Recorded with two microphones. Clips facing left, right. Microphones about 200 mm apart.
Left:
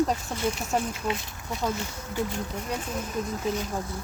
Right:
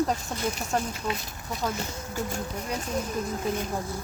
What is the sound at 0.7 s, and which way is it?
Speech, 5° left (ahead or behind).